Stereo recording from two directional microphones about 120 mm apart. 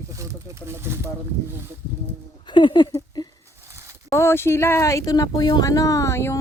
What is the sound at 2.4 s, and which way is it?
Speech, 40° left (ahead or behind).